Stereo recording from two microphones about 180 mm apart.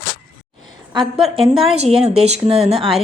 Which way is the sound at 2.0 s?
35° right (ahead or behind).